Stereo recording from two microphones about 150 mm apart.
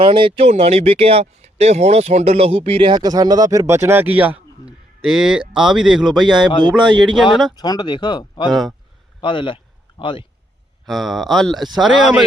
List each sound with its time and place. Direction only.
0.0 s speech: 35° right (ahead or behind); by 7.3 s centre (ahead or behind)
7.5 s speech: 25° left (ahead or behind)
8.4 s speech: centre (ahead or behind)
9.2 s speech: 35° left (ahead or behind)
10.8 s speech: centre (ahead or behind)